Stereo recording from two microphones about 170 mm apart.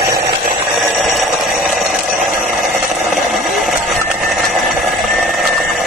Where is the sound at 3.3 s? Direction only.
Centre (ahead or behind).